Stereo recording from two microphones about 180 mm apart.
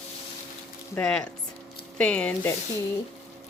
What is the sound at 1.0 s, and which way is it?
Speech, 5° left (ahead or behind).